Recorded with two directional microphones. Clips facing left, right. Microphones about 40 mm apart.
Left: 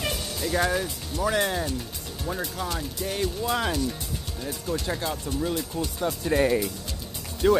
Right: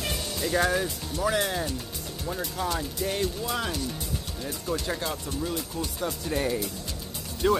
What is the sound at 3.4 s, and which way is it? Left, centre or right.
Speech, left.